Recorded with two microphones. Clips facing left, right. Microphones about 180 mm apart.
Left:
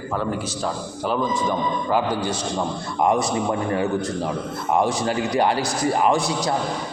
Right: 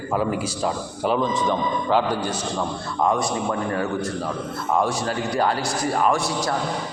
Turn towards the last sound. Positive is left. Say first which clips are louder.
# left 2 dB
turn(degrees=20)  # may be behind; listen again after turning